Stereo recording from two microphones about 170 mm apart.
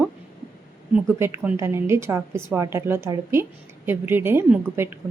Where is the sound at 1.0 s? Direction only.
15° right (ahead or behind).